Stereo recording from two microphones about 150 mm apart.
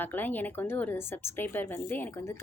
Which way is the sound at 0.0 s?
10° left (ahead or behind).